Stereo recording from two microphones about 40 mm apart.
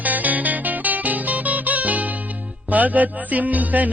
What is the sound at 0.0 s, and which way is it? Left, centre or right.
Music, right.